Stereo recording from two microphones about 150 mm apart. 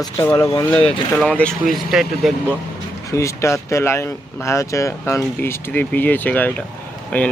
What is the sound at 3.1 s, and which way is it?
Speech, 20° left (ahead or behind).